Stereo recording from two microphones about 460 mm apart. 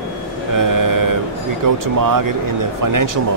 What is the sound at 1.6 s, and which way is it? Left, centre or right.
Speech, right.